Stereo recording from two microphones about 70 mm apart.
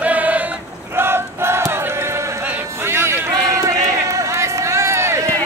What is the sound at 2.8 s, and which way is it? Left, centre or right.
Music, right.